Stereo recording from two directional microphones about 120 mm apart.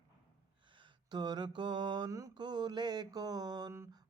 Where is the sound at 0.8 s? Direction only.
35° right (ahead or behind).